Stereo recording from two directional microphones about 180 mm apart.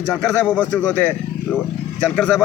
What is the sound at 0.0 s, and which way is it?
A man's voice, 5° left (ahead or behind).